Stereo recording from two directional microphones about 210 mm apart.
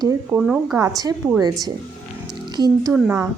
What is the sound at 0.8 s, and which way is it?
Speech, 15° right (ahead or behind).